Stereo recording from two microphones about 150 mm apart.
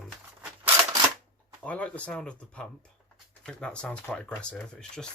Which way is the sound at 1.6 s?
10° left (ahead or behind).